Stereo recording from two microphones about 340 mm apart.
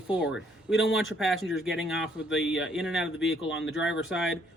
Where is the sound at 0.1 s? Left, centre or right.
Centre.